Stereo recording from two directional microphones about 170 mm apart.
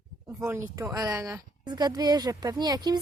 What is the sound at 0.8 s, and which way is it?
Speech, 20° right (ahead or behind).